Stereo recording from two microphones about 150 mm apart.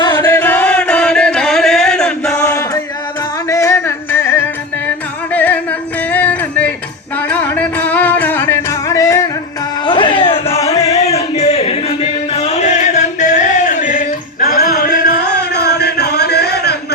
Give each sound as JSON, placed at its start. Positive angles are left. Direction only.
{"t": 0.0, "sound": "music", "side_deg": 25}
{"t": 0.3, "sound": "music", "side_deg": 15}
{"t": 2.4, "sound": "chant", "side_deg": 20}
{"t": 3.5, "sound": "music", "side_deg": 20}
{"t": 5.3, "sound": "singing", "side_deg": 10}
{"t": 6.1, "sound": "music", "side_deg": 10}
{"t": 9.8, "sound": "a sound", "side_deg": 30}
{"t": 10.8, "sound": "music", "side_deg": 45}
{"t": 15.5, "sound": "music", "side_deg": 90}